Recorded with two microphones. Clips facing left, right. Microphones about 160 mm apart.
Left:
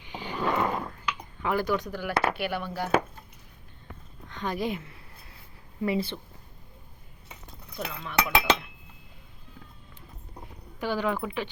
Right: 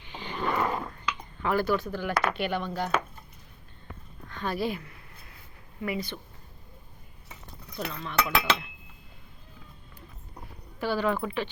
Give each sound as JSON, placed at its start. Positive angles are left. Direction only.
{"t": 0.0, "sound": "dog", "side_deg": 10}
{"t": 0.9, "sound": "a sound", "side_deg": 0}
{"t": 1.5, "sound": "cutlery", "side_deg": 15}
{"t": 4.3, "sound": "speech", "side_deg": 20}
{"t": 7.7, "sound": "cutlery", "side_deg": 10}
{"t": 10.8, "sound": "cutlery", "side_deg": 15}